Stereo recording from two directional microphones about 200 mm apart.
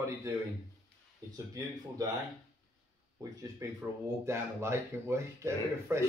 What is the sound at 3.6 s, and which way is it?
Speech, 15° right (ahead or behind).